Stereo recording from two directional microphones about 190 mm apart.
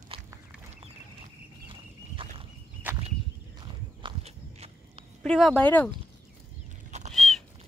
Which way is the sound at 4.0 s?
30° right (ahead or behind).